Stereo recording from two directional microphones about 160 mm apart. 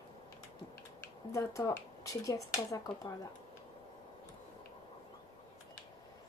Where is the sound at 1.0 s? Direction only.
20° left (ahead or behind).